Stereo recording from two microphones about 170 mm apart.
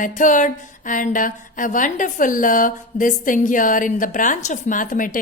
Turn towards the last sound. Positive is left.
turn(degrees=50)  # may be behind; listen again after turning